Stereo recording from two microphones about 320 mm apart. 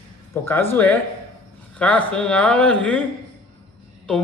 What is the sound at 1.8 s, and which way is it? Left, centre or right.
Speech, centre.